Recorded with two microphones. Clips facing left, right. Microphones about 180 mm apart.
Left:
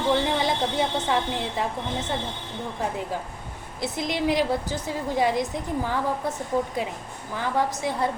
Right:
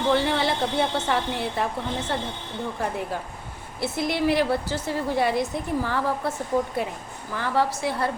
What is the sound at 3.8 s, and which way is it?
A woman's voice, 15° left (ahead or behind).